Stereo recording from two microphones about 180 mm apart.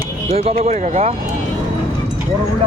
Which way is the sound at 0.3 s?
35° right (ahead or behind).